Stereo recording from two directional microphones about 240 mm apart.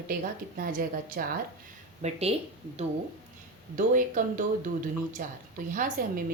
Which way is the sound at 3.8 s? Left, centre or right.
Right.